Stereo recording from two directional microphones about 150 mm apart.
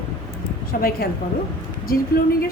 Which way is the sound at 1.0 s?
85° left.